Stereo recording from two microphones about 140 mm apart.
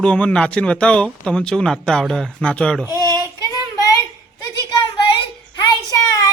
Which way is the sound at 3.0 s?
25° right (ahead or behind).